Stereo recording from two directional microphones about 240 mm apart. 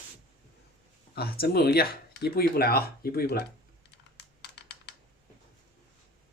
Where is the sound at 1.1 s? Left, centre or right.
Left.